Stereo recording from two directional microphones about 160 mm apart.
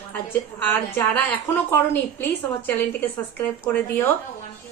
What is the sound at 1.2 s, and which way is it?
A woman's voice, 10° left (ahead or behind).